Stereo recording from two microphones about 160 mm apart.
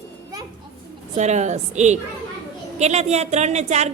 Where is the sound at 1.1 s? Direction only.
45° right (ahead or behind).